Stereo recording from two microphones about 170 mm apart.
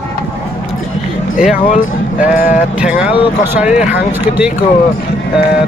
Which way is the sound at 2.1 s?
10° right (ahead or behind).